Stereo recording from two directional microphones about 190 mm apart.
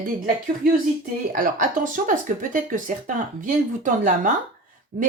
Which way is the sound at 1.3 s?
45° right (ahead or behind).